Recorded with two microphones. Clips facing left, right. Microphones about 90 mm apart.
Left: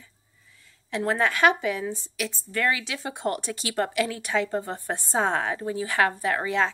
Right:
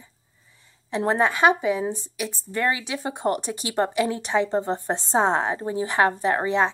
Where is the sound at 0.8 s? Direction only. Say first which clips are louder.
Right 3 dB; 20° right (ahead or behind).